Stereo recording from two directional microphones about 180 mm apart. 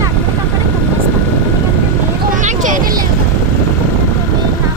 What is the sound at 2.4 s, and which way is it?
Vehicle, 45° right (ahead or behind).